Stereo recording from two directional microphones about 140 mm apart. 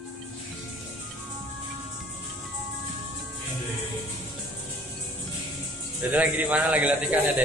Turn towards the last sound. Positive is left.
turn(degrees=-10)  # may be behind; listen again after turning